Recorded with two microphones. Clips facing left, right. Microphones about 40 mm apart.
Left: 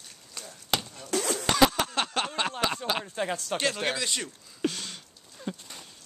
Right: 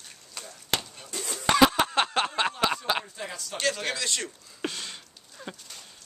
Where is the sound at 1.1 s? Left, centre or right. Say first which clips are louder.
Left 8 dB; left.